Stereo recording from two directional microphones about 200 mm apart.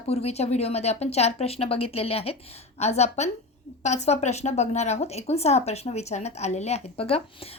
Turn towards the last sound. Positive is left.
turn(degrees=30)  # may be behind; listen again after turning